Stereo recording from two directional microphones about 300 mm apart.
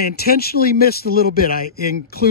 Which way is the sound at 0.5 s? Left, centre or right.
Left.